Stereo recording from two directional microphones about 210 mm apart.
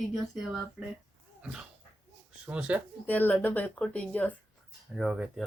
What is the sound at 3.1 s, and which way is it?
Speech, 10° left (ahead or behind).